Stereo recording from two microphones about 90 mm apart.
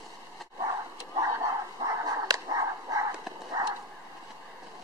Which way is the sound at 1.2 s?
35° right (ahead or behind).